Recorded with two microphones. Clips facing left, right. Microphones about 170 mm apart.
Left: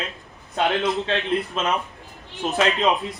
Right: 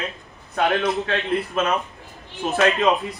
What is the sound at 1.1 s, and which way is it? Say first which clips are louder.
A man's voice: even; 20° left (ahead or behind).